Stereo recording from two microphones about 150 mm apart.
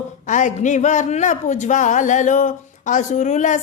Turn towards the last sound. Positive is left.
turn(degrees=55)  # may be behind; listen again after turning